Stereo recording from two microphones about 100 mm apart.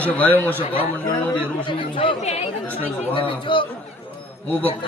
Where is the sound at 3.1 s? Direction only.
55° left (ahead or behind).